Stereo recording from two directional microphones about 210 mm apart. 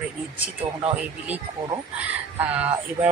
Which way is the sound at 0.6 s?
30° right (ahead or behind).